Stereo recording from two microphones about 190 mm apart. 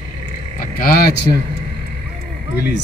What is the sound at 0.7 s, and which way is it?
Speech, 50° left (ahead or behind).